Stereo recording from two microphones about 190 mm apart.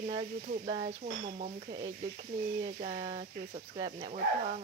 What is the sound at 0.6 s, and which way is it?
Speech, 55° right (ahead or behind).